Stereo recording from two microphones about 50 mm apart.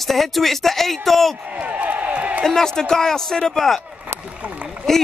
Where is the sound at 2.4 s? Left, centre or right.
Centre.